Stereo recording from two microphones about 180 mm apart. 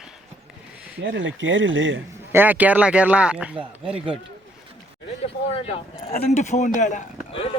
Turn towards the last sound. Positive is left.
turn(degrees=30)  # may be behind; listen again after turning